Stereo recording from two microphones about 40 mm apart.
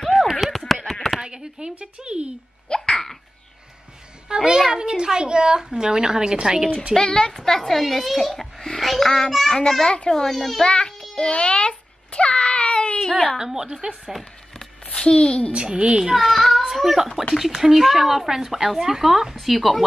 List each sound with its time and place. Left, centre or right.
0.0 s a sound: centre
1.2 s a sound: centre
1.8 s a child's voice: right
2.7 s hiccup: centre
4.5 s a child's voice: centre
7.0 s a child's voice: centre
9.6 s a child's voice: centre
10.6 s a child's voice: left
11.1 s baby cry: left
13.4 s a child's voice: centre
14.9 s a woman's voice: left
15.5 s a child's voice: right
16.2 s a child's voice: centre